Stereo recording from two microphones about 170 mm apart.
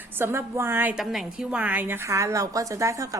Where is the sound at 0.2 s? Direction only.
15° right (ahead or behind).